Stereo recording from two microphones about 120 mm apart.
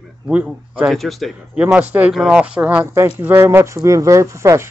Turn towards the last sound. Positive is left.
turn(degrees=-25)  # may be behind; listen again after turning